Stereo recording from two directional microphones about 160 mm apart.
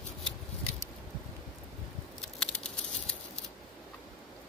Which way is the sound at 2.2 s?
5° left (ahead or behind).